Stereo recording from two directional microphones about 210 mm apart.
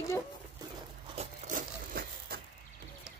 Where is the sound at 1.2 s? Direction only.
40° right (ahead or behind).